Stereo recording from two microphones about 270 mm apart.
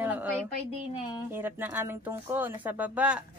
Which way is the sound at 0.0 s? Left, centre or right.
Centre.